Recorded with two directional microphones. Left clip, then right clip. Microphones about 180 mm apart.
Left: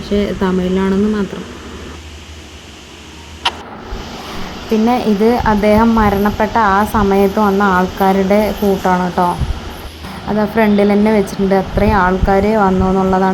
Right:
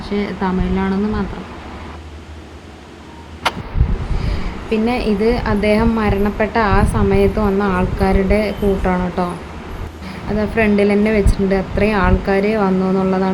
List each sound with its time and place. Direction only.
0.0 s speech: 15° left (ahead or behind)
4.9 s a woman's voice: 10° left (ahead or behind)
10.3 s speech: 5° left (ahead or behind)